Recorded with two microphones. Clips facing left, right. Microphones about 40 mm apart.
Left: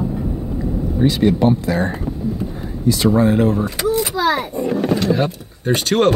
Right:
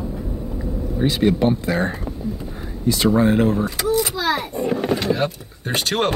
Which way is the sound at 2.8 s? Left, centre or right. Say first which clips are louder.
Left 2 dB; right.